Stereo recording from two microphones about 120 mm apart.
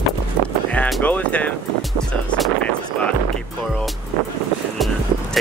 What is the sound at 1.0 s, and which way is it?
Speech, 10° left (ahead or behind).